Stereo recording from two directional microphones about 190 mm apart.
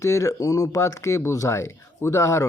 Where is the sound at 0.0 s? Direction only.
15° left (ahead or behind).